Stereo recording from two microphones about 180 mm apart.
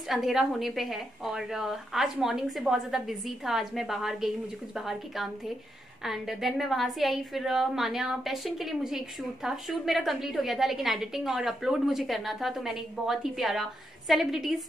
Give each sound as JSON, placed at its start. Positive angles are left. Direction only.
{"t": 0.1, "sound": "a woman's voice", "side_deg": 0}